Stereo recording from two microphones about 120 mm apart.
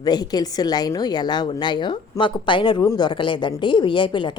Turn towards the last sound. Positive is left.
turn(degrees=40)  # may be behind; listen again after turning